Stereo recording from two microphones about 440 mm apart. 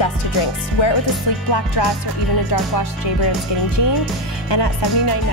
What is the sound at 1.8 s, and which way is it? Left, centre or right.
Speech, left.